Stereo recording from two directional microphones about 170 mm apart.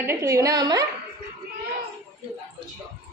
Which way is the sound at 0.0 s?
15° right (ahead or behind).